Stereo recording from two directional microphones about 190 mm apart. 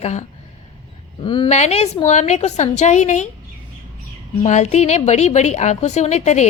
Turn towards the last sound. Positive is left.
turn(degrees=35)  # may be behind; listen again after turning